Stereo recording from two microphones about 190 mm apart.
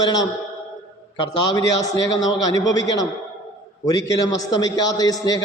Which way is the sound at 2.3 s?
20° left (ahead or behind).